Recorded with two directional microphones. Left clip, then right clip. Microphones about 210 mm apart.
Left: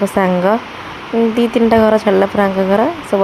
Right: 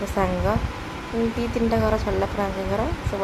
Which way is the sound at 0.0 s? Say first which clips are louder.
Left 10 dB; 35° left (ahead or behind).